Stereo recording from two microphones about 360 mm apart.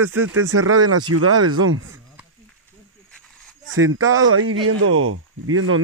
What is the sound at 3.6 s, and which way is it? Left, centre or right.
Speech, right.